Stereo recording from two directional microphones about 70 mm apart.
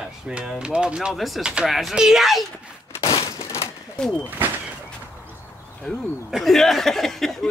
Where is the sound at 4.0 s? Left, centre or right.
Centre.